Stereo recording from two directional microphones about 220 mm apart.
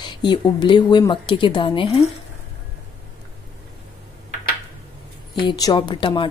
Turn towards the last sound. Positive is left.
turn(degrees=20)  # may be behind; listen again after turning